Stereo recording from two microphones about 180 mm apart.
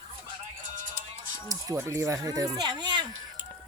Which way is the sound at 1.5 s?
15° right (ahead or behind).